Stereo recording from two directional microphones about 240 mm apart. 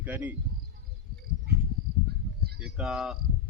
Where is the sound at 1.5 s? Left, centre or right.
Right.